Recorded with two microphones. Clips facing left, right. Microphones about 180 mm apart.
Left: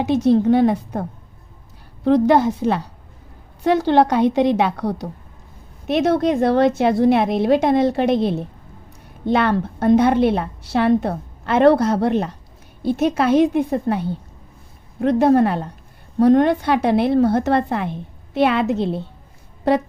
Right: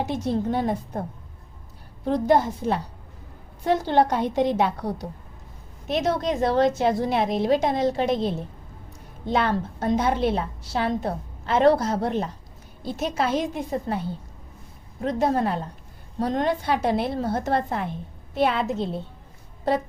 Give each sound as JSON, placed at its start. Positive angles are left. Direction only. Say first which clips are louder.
{"t": 0.0, "sound": "a woman's voice", "louder": "left 9 dB", "side_deg": 75}
{"t": 2.0, "sound": "a woman's voice", "louder": "left 6 dB", "side_deg": 75}
{"t": 5.9, "sound": "a woman's voice", "louder": "left 7 dB", "side_deg": 60}
{"t": 15.0, "sound": "a woman's voice", "louder": "left 8 dB", "side_deg": 65}